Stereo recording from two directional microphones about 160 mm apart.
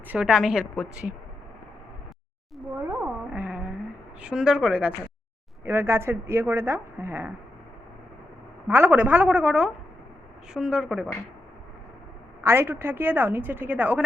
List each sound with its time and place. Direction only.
0.1 s a woman's voice: 5° right (ahead or behind)
3.3 s a sound: 10° right (ahead or behind)
4.2 s a woman's voice: 5° right (ahead or behind)
8.6 s a woman's voice: 10° right (ahead or behind)
12.4 s a woman's voice: 15° right (ahead or behind)